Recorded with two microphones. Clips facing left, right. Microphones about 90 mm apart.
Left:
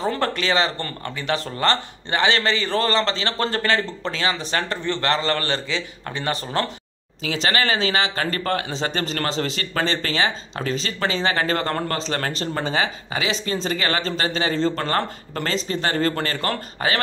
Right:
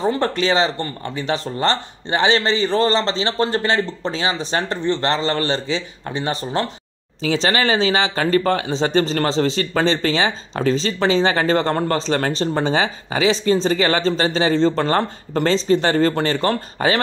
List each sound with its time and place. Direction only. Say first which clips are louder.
0.0 s speech: right 4 dB; 20° right (ahead or behind)